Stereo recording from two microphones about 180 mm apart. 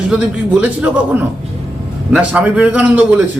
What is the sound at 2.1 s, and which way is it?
Speech, 5° right (ahead or behind).